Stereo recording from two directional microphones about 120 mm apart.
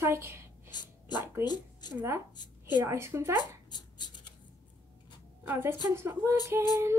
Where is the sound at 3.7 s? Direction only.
35° left (ahead or behind).